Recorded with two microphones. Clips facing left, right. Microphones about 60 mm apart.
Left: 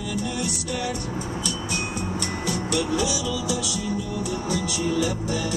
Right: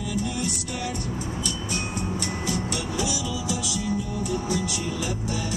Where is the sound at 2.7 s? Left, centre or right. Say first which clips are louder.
Left 4 dB; left.